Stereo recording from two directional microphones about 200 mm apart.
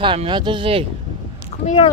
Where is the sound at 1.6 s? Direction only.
30° left (ahead or behind).